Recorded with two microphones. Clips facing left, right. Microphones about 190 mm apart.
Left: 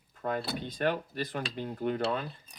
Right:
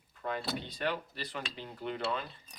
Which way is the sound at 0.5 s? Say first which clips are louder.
Left 5 dB; 50° left (ahead or behind).